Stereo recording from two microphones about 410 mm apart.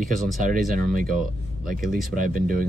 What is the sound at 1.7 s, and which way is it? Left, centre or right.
Speech, centre.